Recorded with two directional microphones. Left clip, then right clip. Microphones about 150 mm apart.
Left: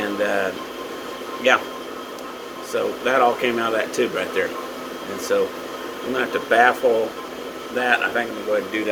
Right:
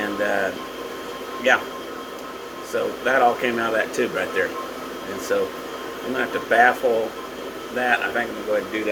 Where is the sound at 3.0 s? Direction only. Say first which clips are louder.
Even; 30° left (ahead or behind).